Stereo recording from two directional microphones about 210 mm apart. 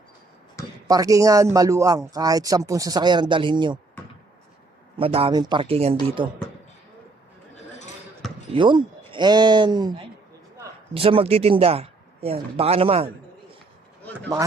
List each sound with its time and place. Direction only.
0.9 s speech: 15° right (ahead or behind)
4.9 s speech: 25° right (ahead or behind)
7.5 s a sound: 35° left (ahead or behind)
8.5 s speech: 20° right (ahead or behind)